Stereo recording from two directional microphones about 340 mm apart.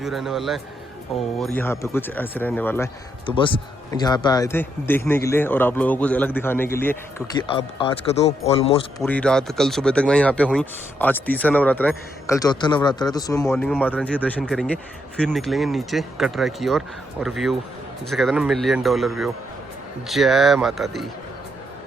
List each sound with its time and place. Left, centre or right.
0.0 s speech: centre
9.0 s speech: centre